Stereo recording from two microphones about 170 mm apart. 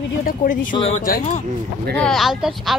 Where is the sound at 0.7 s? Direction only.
35° left (ahead or behind).